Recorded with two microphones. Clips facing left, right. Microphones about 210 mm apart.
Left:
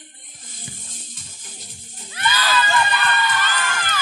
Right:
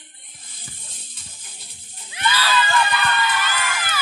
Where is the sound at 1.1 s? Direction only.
45° left (ahead or behind).